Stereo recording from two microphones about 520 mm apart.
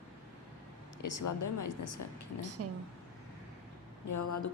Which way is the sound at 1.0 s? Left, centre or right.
Left.